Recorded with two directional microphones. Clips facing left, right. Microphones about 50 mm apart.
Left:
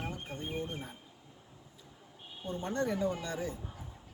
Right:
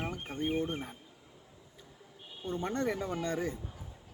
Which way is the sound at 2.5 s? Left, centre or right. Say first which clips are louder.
Right 1 dB; right.